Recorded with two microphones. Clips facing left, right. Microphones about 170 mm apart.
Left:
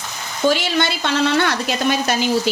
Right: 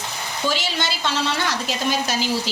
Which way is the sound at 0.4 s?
60° left (ahead or behind).